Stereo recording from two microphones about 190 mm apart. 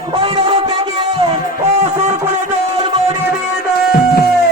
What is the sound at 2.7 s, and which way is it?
Music, 25° right (ahead or behind).